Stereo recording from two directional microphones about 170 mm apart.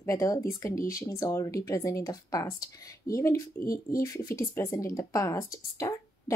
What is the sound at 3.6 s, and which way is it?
Speech, 55° left (ahead or behind).